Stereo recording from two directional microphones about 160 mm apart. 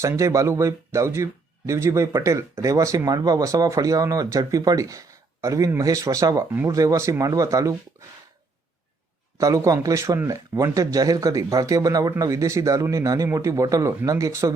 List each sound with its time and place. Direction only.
0.0 s speech: 20° right (ahead or behind)
9.4 s speech: 20° right (ahead or behind)